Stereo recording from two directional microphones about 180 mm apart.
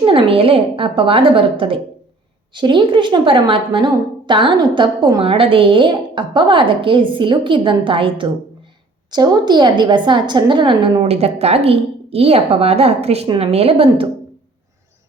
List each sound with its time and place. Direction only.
0.0 s a woman's voice: 30° right (ahead or behind)